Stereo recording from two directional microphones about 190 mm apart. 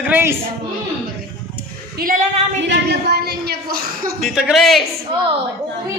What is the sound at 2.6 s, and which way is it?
A woman's voice, 60° right (ahead or behind).